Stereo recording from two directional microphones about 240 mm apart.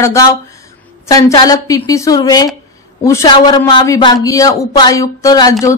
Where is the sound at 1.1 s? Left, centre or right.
Centre.